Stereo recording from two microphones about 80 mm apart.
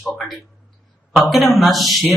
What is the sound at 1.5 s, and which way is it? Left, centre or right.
Speech, centre.